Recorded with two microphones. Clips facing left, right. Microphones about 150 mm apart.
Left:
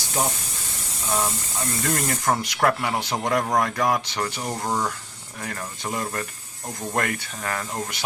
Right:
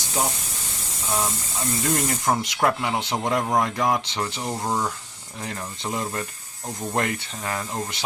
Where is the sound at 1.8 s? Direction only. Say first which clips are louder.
Right 1 dB; 20° right (ahead or behind).